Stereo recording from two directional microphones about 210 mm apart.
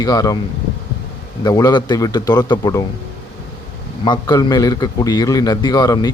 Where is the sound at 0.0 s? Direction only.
20° left (ahead or behind).